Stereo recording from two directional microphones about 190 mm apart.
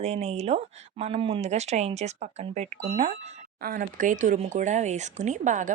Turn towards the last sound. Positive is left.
turn(degrees=-40)  # may be behind; listen again after turning